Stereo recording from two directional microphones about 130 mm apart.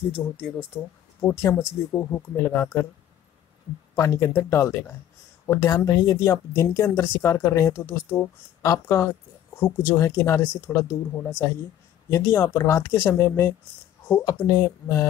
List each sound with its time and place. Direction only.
0.2 s speech: 20° left (ahead or behind)
0.7 s speech: 10° right (ahead or behind)
1.2 s speech: 20° left (ahead or behind)
3.9 s speech: 25° left (ahead or behind)